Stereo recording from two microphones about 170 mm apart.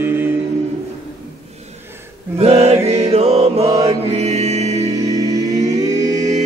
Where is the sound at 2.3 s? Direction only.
35° right (ahead or behind).